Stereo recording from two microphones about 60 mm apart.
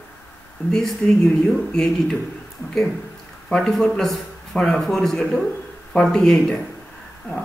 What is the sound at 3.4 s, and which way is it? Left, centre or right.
Speech, centre.